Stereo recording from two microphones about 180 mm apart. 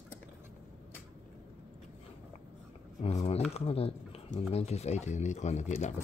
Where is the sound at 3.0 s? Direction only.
35° left (ahead or behind).